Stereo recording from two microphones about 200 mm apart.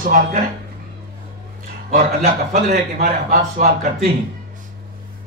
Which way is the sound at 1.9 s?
40° right (ahead or behind).